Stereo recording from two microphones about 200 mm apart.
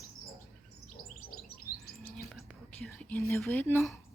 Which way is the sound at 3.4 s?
10° left (ahead or behind).